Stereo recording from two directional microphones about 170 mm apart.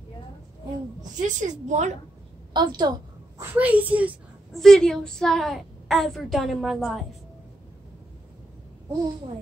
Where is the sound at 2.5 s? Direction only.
25° right (ahead or behind).